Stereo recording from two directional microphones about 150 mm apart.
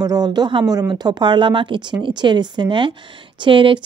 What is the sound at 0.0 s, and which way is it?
A woman's voice, 25° right (ahead or behind).